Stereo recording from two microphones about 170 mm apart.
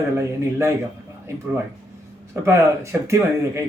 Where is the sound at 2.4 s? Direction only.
15° right (ahead or behind).